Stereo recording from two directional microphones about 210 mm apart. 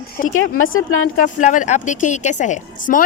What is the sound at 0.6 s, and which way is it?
Speech, 70° left (ahead or behind).